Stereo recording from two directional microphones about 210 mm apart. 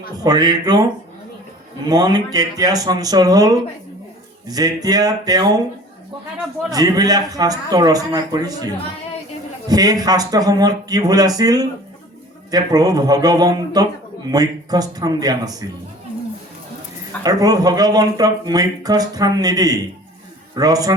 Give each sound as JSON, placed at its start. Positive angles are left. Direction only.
{"t": 0.2, "sound": "speech", "side_deg": -20}
{"t": 1.9, "sound": "speech", "side_deg": -20}
{"t": 6.7, "sound": "speech", "side_deg": -15}
{"t": 17.2, "sound": "speech", "side_deg": -15}